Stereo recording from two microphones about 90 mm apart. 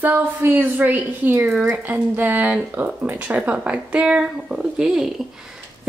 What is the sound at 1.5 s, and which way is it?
Speech, 10° right (ahead or behind).